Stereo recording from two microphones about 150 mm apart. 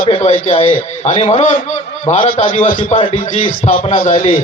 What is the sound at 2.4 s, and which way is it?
A man's voice, 35° left (ahead or behind).